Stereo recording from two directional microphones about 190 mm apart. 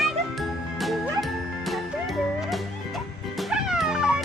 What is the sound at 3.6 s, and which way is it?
Cat, 5° right (ahead or behind).